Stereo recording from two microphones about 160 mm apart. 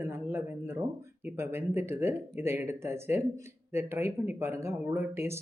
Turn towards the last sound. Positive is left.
turn(degrees=-15)  # may be behind; listen again after turning